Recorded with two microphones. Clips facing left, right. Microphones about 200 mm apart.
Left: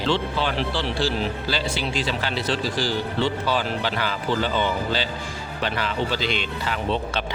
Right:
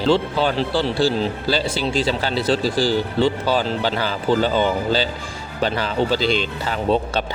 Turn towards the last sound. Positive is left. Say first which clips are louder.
# right 5 dB
turn(degrees=-35)  # may be behind; listen again after turning